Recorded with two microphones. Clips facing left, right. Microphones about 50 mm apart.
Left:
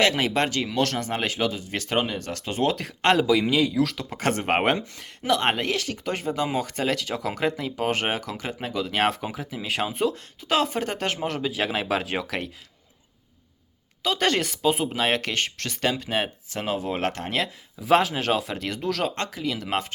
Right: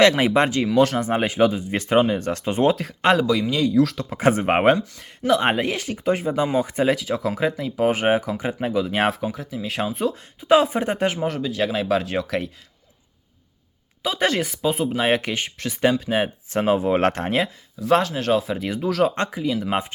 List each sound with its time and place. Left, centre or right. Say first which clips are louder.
0.1 s speech: right 5 dB; right
2.7 s speech: right 2 dB; centre
4.2 s speech: right 5 dB; centre
9.3 s speech: right 1 dB; centre
10.4 s speech: right 7 dB; centre
11.3 s speech: right 3 dB; centre
14.0 s speech: right 2 dB; centre
14.9 s speech: right 3 dB; centre
16.5 s speech: right 8 dB; right
17.7 s speech: right 1 dB; centre
19.1 s speech: right 5 dB; right
19.4 s speech: right 5 dB; centre